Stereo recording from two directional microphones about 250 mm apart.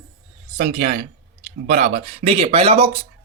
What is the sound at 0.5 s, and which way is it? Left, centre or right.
Speech, right.